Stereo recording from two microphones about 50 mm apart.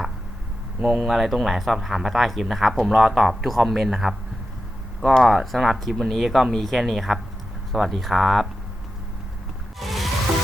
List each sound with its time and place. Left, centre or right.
0.8 s speech: right
1.0 s speech: centre
5.2 s speech: centre
9.8 s music: centre